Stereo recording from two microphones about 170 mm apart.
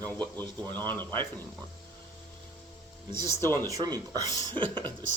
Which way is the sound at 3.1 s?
25° right (ahead or behind).